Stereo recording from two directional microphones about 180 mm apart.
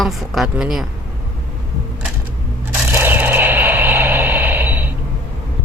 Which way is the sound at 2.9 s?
10° right (ahead or behind).